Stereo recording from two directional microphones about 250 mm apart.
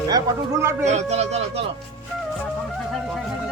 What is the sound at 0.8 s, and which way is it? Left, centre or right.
Speech, right.